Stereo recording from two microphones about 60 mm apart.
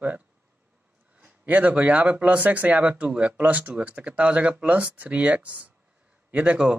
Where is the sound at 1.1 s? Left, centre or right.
Right.